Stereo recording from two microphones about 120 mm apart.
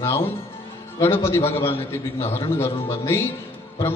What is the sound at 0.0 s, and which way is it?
A man's voice, 20° left (ahead or behind).